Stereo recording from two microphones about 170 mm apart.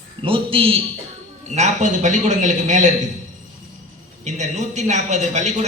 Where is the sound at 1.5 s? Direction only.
45° right (ahead or behind).